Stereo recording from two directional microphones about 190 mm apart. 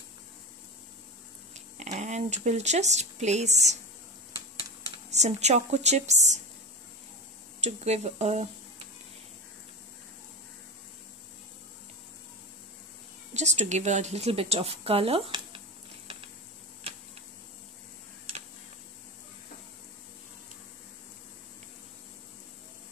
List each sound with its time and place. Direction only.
1.5 s speech: 35° right (ahead or behind)
5.1 s a woman's voice: 35° right (ahead or behind)
7.6 s speech: 35° right (ahead or behind)
13.3 s speech: 40° right (ahead or behind)